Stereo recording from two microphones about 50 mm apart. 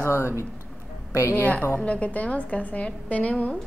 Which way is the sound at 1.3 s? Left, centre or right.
Left.